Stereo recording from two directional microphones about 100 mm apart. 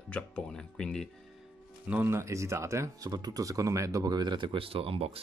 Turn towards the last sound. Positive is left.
turn(degrees=-75)  # may be behind; listen again after turning